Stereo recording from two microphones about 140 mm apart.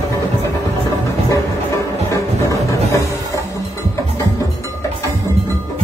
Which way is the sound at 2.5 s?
20° left (ahead or behind).